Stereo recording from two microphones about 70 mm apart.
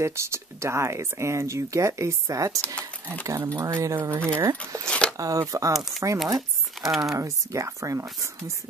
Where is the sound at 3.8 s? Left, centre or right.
Right.